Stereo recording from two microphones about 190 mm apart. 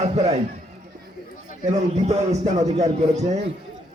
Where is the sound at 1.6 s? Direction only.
35° right (ahead or behind).